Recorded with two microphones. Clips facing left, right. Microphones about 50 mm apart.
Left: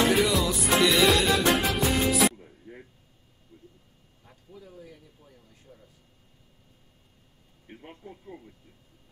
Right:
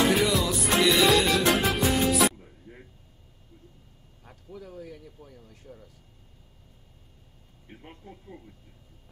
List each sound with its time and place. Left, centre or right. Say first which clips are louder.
0.1 s music: even; centre
4.5 s speech: right 5 dB; right
7.6 s speech: left 2 dB; centre